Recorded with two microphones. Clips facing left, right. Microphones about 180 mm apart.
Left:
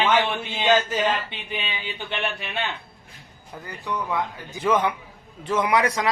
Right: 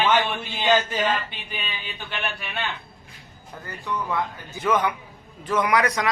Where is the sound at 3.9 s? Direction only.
15° left (ahead or behind).